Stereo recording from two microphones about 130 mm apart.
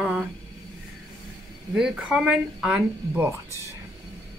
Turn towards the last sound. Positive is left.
turn(degrees=-15)  # may be behind; listen again after turning